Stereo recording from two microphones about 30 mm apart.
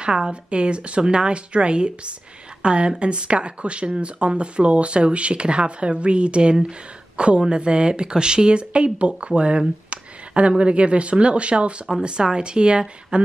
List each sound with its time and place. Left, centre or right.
0.0 s a woman's voice: right
9.8 s a sound: right
10.6 s speech: right
12.0 s speech: right